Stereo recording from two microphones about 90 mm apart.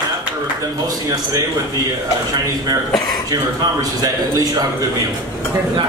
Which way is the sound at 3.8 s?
40° right (ahead or behind).